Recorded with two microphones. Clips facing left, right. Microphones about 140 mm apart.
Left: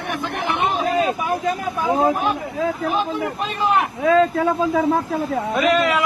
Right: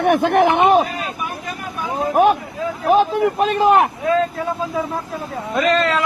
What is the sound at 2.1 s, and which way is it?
Speech, 65° right (ahead or behind).